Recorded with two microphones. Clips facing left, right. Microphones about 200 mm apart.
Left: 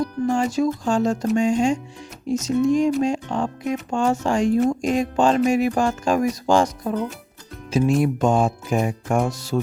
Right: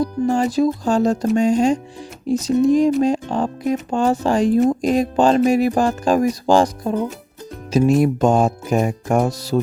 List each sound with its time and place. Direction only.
0.0 s speech: 35° right (ahead or behind)